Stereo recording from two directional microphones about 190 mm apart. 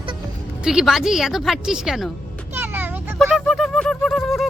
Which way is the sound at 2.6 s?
10° right (ahead or behind).